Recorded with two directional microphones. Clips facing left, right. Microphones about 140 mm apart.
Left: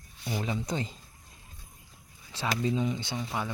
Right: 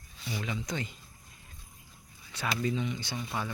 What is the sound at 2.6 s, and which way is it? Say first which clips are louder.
Speech: left 3 dB; 30° left (ahead or behind).